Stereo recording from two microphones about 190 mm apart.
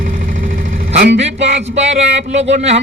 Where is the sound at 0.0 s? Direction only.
45° right (ahead or behind).